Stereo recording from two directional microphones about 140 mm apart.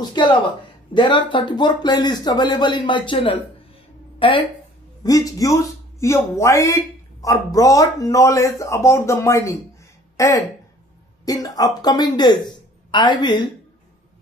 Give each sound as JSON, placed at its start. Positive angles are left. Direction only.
{"t": 0.0, "sound": "speech", "side_deg": 30}
{"t": 5.0, "sound": "a woman's voice", "side_deg": 25}